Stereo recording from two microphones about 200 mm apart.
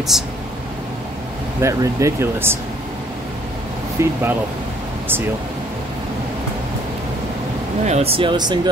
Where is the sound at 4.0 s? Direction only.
15° right (ahead or behind).